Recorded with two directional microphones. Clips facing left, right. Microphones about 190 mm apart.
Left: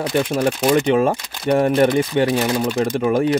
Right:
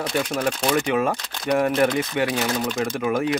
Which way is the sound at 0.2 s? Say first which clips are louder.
Left 6 dB; 25° left (ahead or behind).